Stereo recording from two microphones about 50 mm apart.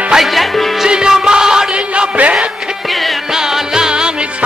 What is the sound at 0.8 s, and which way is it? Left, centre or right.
Music, centre.